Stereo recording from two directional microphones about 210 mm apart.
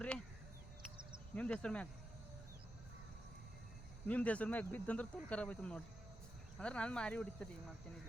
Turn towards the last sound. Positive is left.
turn(degrees=5)  # may be behind; listen again after turning